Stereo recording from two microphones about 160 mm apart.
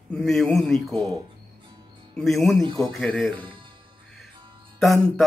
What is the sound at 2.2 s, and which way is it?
Speech, centre (ahead or behind).